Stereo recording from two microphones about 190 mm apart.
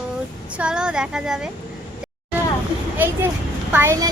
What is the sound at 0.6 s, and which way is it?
Speech, 5° right (ahead or behind).